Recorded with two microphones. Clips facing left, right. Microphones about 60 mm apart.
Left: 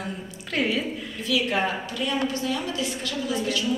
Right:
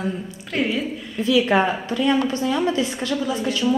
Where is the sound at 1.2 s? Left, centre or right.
Right.